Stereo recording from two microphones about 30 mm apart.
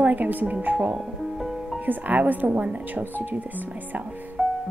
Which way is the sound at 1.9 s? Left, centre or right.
Right.